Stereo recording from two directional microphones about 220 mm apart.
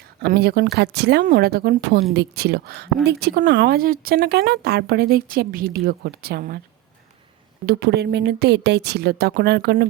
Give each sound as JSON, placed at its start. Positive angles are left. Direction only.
{"t": 0.2, "sound": "speech", "side_deg": -45}
{"t": 7.7, "sound": "speech", "side_deg": -50}